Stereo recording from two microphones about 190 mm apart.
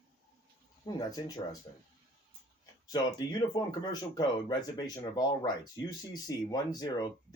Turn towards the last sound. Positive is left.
turn(degrees=20)  # may be behind; listen again after turning